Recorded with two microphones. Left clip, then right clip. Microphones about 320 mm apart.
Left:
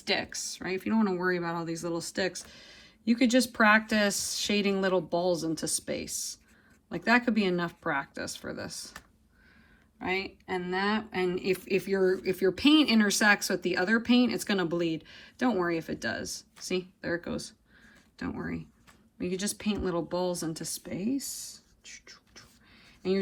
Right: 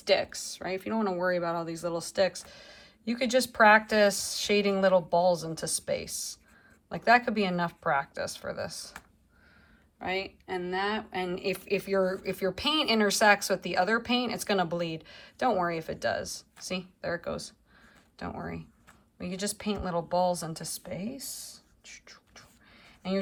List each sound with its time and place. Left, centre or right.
0.0 s speech: centre
10.0 s speech: centre
21.2 s whispering: right